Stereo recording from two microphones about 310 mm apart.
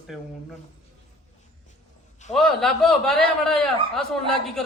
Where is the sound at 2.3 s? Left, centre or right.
Centre.